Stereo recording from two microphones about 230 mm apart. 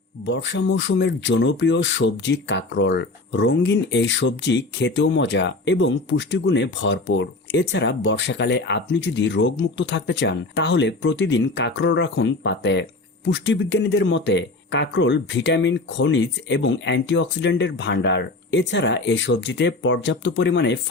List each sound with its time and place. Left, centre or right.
0.3 s speech: left